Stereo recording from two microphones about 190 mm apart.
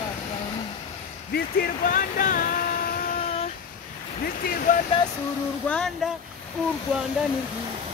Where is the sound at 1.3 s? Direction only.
50° left (ahead or behind).